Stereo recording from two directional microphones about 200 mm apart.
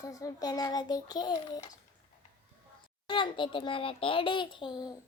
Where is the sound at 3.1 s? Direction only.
25° left (ahead or behind).